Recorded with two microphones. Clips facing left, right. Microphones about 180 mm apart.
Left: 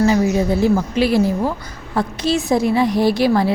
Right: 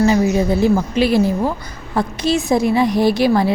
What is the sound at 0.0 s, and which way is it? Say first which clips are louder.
A woman's voice: right 1 dB; 20° right (ahead or behind).